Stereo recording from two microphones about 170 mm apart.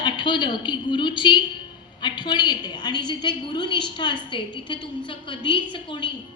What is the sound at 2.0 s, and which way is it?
A woman's voice, 25° left (ahead or behind).